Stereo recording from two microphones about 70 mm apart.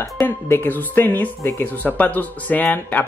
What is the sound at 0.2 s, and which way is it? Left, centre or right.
Speech, left.